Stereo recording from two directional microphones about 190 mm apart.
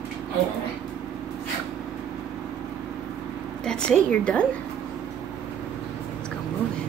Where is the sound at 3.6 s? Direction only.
5° left (ahead or behind).